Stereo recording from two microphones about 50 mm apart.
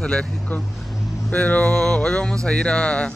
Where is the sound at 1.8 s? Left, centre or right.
Centre.